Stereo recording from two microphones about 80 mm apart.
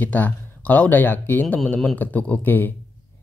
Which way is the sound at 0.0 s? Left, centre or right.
Centre.